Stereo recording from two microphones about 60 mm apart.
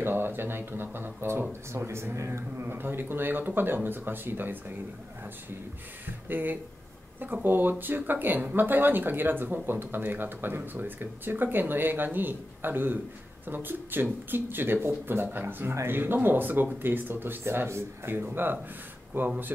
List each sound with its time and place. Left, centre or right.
0.0 s speech: right
2.6 s speech: right
6.2 s speech: right